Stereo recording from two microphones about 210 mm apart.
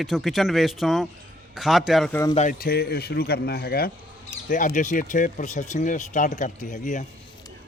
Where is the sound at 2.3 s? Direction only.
35° left (ahead or behind).